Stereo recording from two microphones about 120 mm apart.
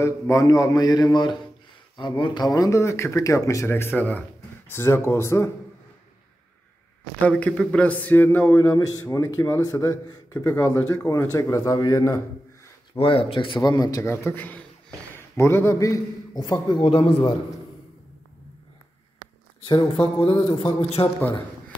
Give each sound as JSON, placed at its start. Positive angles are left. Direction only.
{"t": 0.0, "sound": "a man's voice", "side_deg": 25}
{"t": 7.2, "sound": "speech", "side_deg": 10}
{"t": 8.7, "sound": "speech", "side_deg": 30}
{"t": 12.9, "sound": "a man's voice", "side_deg": 50}
{"t": 13.6, "sound": "a man's voice", "side_deg": 30}
{"t": 19.8, "sound": "a man's voice", "side_deg": 55}
{"t": 21.2, "sound": "a man's voice", "side_deg": 15}